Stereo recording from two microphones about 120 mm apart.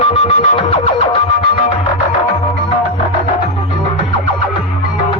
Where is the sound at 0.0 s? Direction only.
50° left (ahead or behind).